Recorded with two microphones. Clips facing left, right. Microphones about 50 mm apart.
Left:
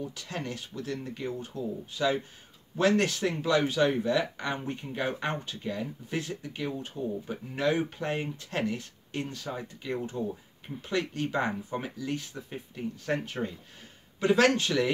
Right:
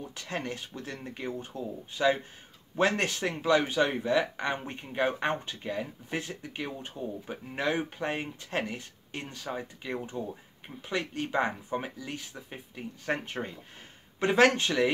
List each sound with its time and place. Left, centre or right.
0.1 s speech: right; by 13.1 s centre
13.1 s speech: right